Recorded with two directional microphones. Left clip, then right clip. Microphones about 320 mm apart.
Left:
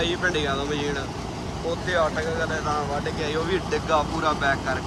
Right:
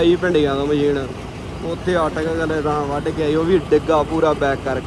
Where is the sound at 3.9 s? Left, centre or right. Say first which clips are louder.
Right 6 dB; centre.